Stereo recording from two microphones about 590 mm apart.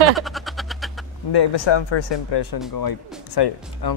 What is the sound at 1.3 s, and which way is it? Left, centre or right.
A man's voice, left.